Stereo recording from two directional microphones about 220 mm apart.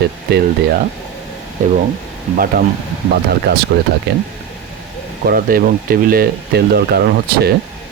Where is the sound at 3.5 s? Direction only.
50° right (ahead or behind).